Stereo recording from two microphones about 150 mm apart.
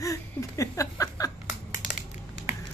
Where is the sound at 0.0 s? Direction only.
20° left (ahead or behind).